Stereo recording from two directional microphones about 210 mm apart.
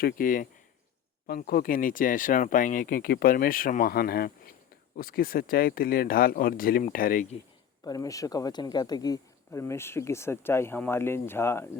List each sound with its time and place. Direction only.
0.0 s speech: 45° left (ahead or behind)
7.9 s speech: 15° left (ahead or behind)